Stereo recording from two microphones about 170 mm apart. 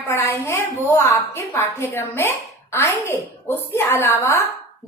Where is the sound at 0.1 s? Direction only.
15° left (ahead or behind).